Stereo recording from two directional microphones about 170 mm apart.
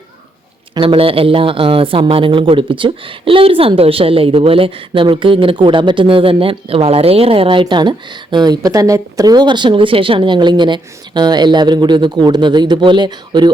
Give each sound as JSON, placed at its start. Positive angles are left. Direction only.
{"t": 0.7, "sound": "speech", "side_deg": -30}